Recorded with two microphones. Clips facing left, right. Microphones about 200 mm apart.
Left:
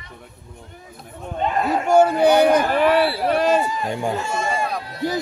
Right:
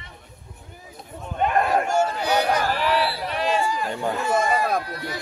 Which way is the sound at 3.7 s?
20° left (ahead or behind).